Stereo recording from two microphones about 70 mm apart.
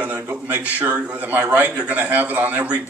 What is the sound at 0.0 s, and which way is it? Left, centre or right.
A man's voice, right.